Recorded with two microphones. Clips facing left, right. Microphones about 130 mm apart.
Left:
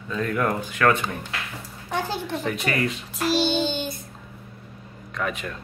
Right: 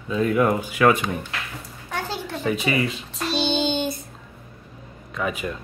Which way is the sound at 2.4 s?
5° right (ahead or behind).